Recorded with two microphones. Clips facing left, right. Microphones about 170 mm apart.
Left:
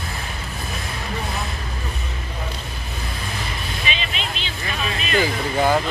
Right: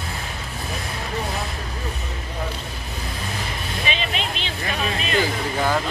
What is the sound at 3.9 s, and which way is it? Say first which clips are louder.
Vehicle: right 3 dB; 45° right (ahead or behind).